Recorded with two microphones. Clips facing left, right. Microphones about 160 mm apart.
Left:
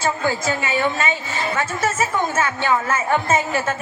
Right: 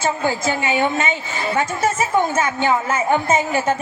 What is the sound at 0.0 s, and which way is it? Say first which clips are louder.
A woman's voice: right 1 dB; 20° right (ahead or behind).